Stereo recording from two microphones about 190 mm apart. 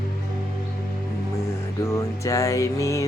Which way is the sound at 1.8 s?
15° left (ahead or behind).